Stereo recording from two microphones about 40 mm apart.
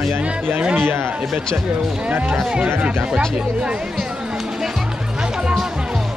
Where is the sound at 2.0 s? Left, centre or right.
Right.